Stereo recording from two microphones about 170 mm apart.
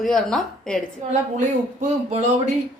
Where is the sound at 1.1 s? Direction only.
45° right (ahead or behind).